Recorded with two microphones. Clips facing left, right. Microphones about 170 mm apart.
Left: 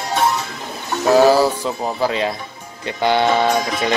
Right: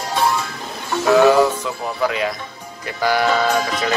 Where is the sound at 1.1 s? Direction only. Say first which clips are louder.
Even; 35° left (ahead or behind).